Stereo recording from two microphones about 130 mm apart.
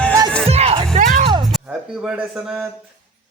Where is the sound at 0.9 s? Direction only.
80° right.